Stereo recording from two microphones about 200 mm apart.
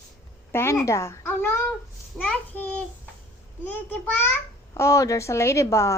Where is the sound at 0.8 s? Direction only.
15° left (ahead or behind).